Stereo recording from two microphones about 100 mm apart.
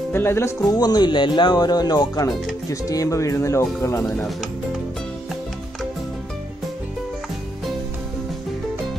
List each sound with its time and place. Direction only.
0.1 s speech: 25° left (ahead or behind)
0.7 s speech: 40° left (ahead or behind)